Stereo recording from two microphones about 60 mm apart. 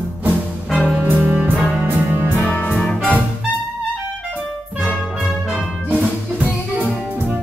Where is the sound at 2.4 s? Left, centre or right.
Left.